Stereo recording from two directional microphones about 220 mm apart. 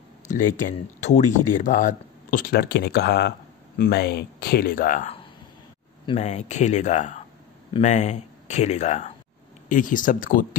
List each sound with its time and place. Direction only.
0.3 s speech: 35° left (ahead or behind)